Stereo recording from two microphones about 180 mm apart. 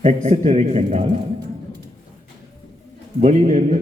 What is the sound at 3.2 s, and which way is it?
Speech, 40° right (ahead or behind).